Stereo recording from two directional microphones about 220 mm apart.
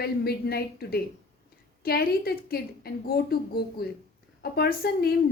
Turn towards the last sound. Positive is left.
turn(degrees=45)  # may be behind; listen again after turning